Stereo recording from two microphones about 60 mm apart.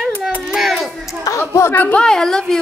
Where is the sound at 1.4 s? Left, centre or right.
Left.